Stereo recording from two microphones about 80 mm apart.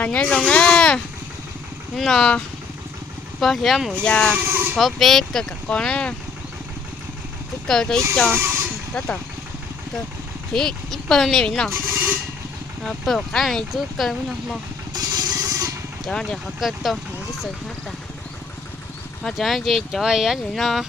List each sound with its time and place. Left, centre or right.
0.0 s speech: centre
3.4 s speech: centre
4.0 s speech: centre
4.4 s speech: right
4.8 s speech: centre
7.7 s speech: centre
8.3 s speech: right
10.5 s speech: centre
12.8 s speech: centre
14.9 s vehicle: right
16.0 s speech: centre
16.6 s speech: centre
19.2 s speech: centre